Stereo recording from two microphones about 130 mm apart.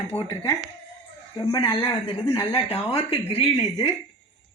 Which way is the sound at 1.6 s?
45° left (ahead or behind).